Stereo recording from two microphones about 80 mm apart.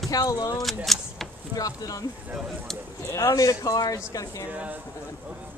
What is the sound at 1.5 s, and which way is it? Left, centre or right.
Speech, left.